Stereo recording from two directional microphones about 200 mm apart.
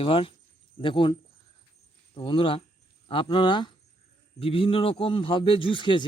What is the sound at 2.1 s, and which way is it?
Speech, 25° left (ahead or behind).